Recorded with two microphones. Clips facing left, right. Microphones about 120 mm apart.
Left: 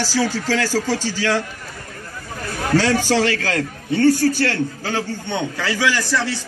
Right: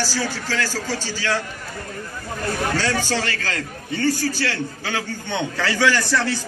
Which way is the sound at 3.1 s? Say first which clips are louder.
Left 6 dB; 90° left.